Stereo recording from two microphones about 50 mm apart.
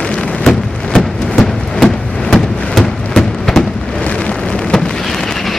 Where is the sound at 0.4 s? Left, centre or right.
Centre.